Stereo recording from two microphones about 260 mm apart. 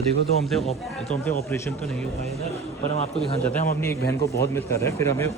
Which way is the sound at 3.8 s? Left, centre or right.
Centre.